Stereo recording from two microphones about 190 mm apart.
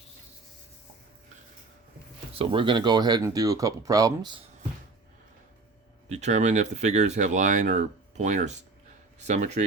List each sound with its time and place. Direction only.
2.3 s speech: 30° right (ahead or behind)
6.1 s speech: 35° right (ahead or behind)